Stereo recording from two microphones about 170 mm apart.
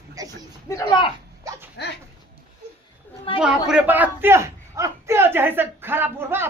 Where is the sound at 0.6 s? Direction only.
15° left (ahead or behind).